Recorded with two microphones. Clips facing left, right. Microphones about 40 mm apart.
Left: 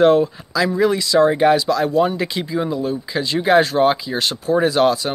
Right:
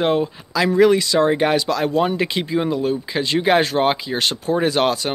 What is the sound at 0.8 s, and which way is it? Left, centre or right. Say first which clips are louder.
Speech: right 1 dB; right.